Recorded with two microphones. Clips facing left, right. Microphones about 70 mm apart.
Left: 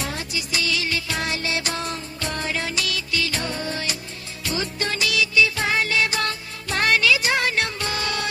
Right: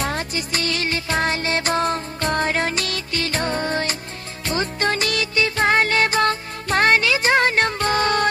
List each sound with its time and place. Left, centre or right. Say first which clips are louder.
0.0 s music: right 5 dB; right